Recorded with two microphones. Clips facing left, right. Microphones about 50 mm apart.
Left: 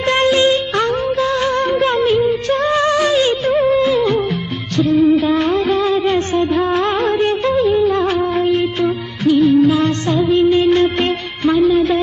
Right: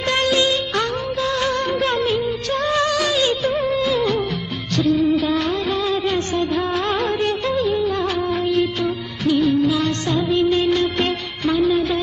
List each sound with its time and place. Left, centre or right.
0.0 s music of bollywood: left
1.5 s music of bollywood: left
2.1 s music: left
3.4 s music: left
6.6 s music of bollywood: centre
7.7 s music: left
8.3 s music of bollywood: left
9.2 s music: centre
10.2 s music of bollywood: left
10.8 s music of bollywood: left
11.6 s music: centre